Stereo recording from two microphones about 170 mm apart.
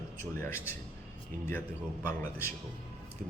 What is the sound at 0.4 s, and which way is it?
Speech, 15° left (ahead or behind).